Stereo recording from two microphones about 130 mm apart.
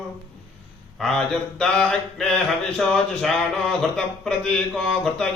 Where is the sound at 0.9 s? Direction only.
5° left (ahead or behind).